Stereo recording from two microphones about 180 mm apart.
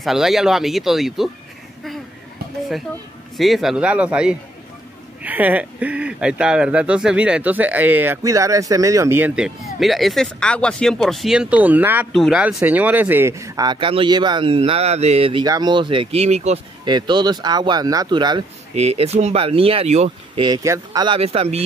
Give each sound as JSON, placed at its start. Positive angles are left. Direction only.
{"t": 0.0, "sound": "speech", "side_deg": 0}
{"t": 3.3, "sound": "speech", "side_deg": 0}
{"t": 16.8, "sound": "speech", "side_deg": -25}
{"t": 20.4, "sound": "speech", "side_deg": -20}